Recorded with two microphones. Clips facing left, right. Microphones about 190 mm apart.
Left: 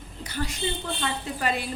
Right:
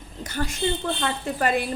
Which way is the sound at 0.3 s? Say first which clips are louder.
Right 4 dB; 50° right (ahead or behind).